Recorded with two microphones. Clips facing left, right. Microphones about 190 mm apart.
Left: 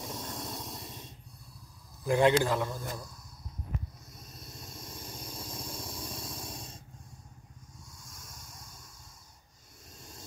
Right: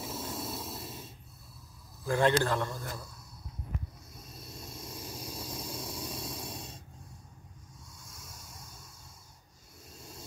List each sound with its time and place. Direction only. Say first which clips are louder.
0.0 s a sound: right 2 dB; 5° right (ahead or behind)
2.0 s speech: left 2 dB; 15° left (ahead or behind)
2.5 s a man's voice: left 1 dB; centre (ahead or behind)
4.2 s vehicle: right 2 dB; 5° right (ahead or behind)
8.0 s vehicle: right 2 dB; 5° right (ahead or behind)
9.9 s a sound: right 2 dB; 5° right (ahead or behind)